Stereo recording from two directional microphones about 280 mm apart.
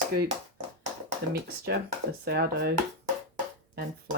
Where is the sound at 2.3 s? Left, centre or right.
Right.